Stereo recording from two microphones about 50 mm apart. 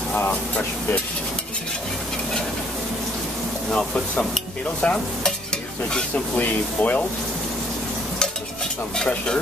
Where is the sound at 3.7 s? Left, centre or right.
Centre.